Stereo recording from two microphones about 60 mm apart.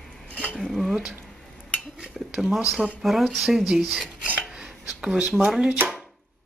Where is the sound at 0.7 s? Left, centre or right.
Centre.